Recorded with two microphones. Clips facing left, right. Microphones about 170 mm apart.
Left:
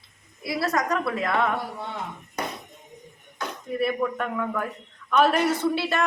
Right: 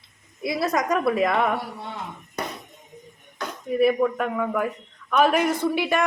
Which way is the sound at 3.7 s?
10° right (ahead or behind).